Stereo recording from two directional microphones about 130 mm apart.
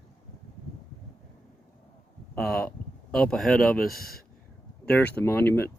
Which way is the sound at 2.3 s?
5° left (ahead or behind).